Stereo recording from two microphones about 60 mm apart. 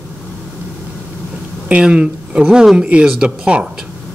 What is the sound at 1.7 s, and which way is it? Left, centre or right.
Speech, centre.